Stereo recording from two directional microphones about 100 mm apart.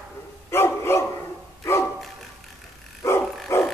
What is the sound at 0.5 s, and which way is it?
Dog, 25° left (ahead or behind).